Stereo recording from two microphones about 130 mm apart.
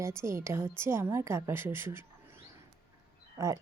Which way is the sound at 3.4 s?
25° right (ahead or behind).